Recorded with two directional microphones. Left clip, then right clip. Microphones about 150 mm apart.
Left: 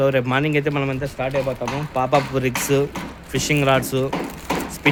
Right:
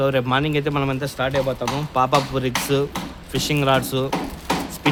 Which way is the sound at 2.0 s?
5° right (ahead or behind).